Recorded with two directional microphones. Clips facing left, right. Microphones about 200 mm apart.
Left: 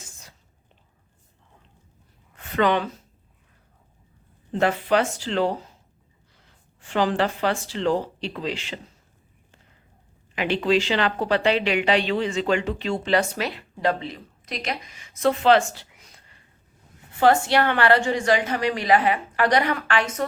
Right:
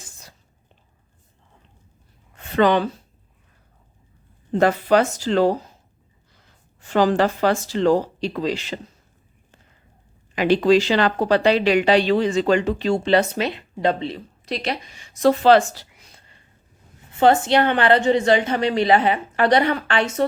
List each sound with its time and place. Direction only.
2.3 s a sound: 35° right (ahead or behind)
4.5 s speech: 40° right (ahead or behind)
6.8 s speech: 40° right (ahead or behind)
10.3 s speech: 40° right (ahead or behind)
17.2 s a woman's voice: 20° right (ahead or behind)